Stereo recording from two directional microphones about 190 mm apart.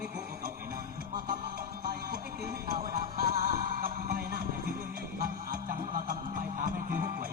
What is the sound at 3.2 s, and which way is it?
Music, 50° right (ahead or behind).